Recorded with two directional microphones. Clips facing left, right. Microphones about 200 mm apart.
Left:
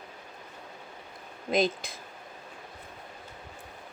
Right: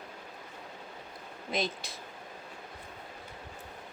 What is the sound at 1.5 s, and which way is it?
Speech, 50° left (ahead or behind).